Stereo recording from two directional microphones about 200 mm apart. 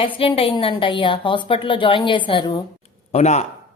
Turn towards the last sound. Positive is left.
turn(degrees=35)  # may be behind; listen again after turning